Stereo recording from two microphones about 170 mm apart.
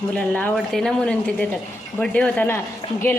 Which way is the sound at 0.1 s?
10° left (ahead or behind).